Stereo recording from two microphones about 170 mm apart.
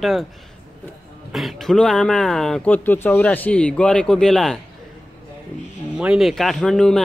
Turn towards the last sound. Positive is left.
turn(degrees=5)  # may be behind; listen again after turning